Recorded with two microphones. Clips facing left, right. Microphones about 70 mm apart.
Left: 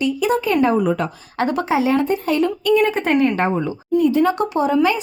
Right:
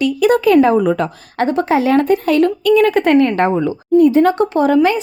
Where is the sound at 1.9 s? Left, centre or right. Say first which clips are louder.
Right 5 dB; right.